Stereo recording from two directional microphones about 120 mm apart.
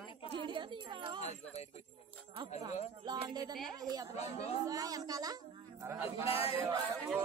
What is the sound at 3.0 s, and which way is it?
Speech, 35° right (ahead or behind).